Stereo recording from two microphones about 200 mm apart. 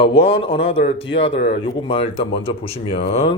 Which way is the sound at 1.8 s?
30° left (ahead or behind).